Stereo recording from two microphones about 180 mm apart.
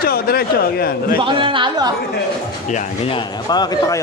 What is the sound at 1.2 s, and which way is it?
Speech, 30° right (ahead or behind).